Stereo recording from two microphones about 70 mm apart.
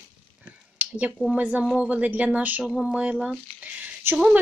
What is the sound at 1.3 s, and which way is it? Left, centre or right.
Speech, right.